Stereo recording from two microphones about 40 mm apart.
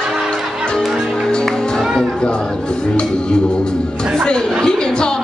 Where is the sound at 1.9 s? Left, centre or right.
Centre.